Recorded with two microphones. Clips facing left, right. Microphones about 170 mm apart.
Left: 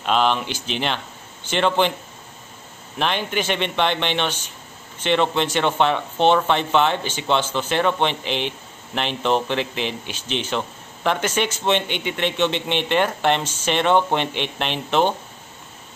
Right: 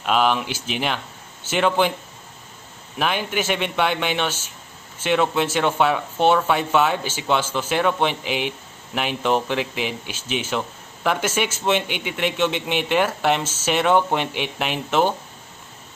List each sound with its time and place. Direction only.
0.0 s speech: 5° right (ahead or behind)
3.0 s speech: 5° right (ahead or behind)